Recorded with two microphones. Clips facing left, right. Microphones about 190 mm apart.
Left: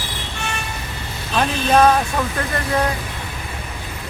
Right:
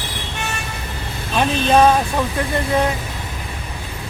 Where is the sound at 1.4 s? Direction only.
10° right (ahead or behind).